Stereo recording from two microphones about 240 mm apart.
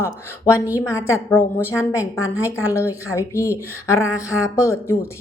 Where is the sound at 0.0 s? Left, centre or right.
Centre.